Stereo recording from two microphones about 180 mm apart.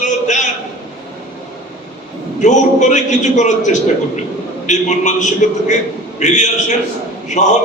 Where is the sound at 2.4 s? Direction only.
40° left (ahead or behind).